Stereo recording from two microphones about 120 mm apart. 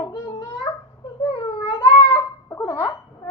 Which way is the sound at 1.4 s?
35° left (ahead or behind).